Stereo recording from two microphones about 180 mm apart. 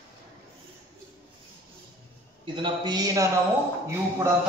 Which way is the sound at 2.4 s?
25° right (ahead or behind).